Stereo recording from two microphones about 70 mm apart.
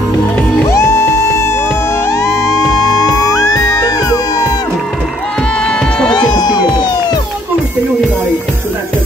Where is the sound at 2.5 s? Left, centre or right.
Left.